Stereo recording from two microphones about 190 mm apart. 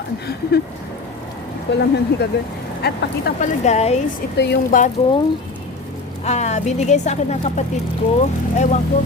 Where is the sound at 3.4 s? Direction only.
35° left (ahead or behind).